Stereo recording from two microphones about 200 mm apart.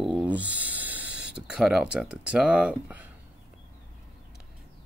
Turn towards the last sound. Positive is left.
turn(degrees=-5)  # may be behind; listen again after turning